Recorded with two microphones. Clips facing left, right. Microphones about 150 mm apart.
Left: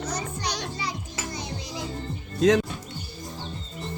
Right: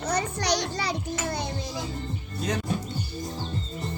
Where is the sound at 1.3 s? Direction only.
60° right (ahead or behind).